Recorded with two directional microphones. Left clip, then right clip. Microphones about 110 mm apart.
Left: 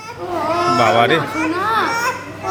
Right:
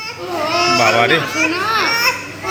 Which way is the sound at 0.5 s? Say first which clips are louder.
Right 1 dB; 30° left (ahead or behind).